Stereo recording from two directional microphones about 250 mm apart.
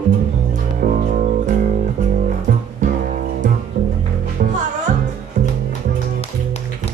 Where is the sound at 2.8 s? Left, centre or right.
Right.